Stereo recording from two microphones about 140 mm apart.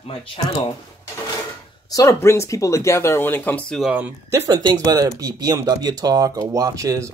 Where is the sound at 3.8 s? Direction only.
5° right (ahead or behind).